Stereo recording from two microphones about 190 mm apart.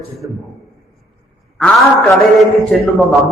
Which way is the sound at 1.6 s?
5° left (ahead or behind).